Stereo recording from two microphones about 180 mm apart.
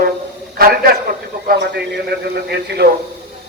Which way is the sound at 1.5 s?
70° right (ahead or behind).